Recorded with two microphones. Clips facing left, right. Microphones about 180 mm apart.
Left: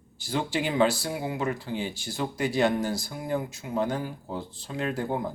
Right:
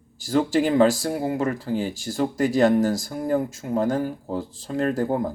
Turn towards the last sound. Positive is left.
turn(degrees=-45)  # may be behind; listen again after turning